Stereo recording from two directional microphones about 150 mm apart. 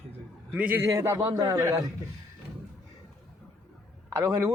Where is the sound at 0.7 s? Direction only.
20° right (ahead or behind).